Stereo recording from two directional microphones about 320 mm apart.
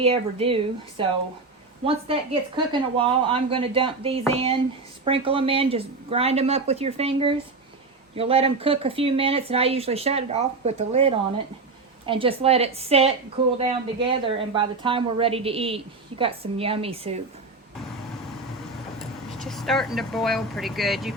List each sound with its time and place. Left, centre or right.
0.0 s a woman's voice: centre
19.4 s speech: centre